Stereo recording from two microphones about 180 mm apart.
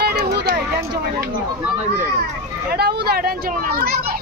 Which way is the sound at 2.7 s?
60° right (ahead or behind).